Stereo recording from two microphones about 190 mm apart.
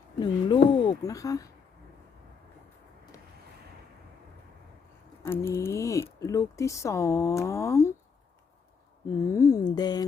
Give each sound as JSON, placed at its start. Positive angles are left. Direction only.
{"t": 0.2, "sound": "speech", "side_deg": 25}
{"t": 5.2, "sound": "speech", "side_deg": 15}
{"t": 9.0, "sound": "a sound", "side_deg": 15}